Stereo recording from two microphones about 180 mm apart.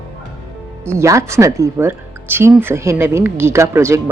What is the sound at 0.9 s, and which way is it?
Speech, 15° right (ahead or behind).